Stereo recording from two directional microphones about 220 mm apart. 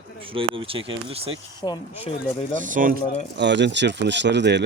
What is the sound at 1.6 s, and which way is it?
Speech, 15° left (ahead or behind).